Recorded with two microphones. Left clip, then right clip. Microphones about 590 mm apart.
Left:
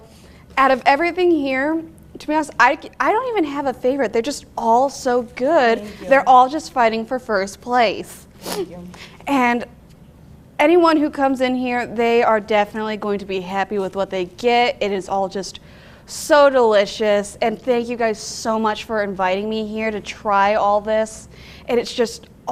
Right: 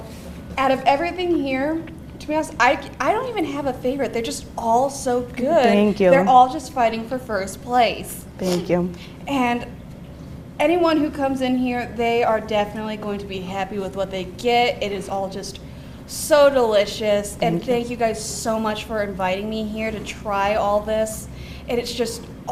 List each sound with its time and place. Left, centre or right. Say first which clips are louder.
0.5 s a woman's voice: left 3 dB; left
8.7 s a woman's voice: right 17 dB; right
9.2 s a woman's voice: left 4 dB; left